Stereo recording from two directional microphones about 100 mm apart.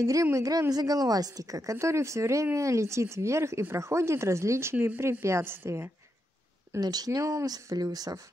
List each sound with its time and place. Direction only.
0.0 s a woman's voice: 30° right (ahead or behind)
6.8 s speech: 40° right (ahead or behind)